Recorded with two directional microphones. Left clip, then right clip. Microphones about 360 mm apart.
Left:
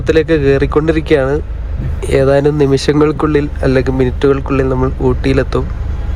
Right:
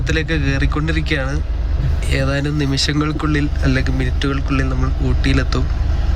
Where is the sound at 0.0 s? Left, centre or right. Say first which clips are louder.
Left 10 dB; centre.